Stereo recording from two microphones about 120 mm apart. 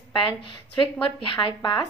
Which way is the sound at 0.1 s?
45° left (ahead or behind).